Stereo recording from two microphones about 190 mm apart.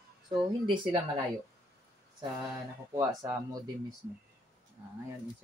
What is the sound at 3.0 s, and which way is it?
Speech, 20° right (ahead or behind).